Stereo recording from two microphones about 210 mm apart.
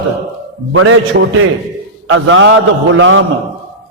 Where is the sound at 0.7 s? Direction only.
75° right (ahead or behind).